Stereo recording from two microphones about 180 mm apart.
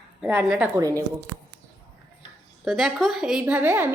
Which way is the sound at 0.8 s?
20° right (ahead or behind).